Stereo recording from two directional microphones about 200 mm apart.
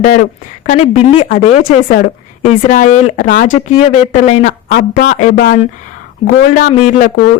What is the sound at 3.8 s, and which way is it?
Speech, 35° left (ahead or behind).